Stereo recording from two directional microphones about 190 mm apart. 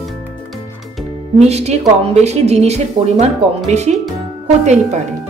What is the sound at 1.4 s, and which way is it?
Speech, 35° right (ahead or behind).